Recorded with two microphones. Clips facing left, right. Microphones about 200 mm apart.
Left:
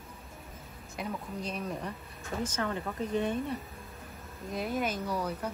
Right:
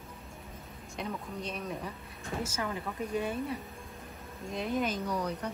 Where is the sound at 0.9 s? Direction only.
Centre (ahead or behind).